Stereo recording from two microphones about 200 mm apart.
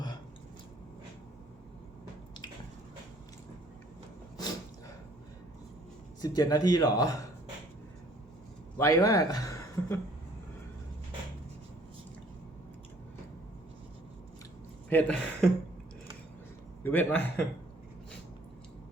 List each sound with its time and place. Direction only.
6.2 s a man's voice: 20° left (ahead or behind)
8.8 s a man's voice: 15° left (ahead or behind)
14.8 s speech: 5° left (ahead or behind)
16.8 s a man's voice: 10° left (ahead or behind)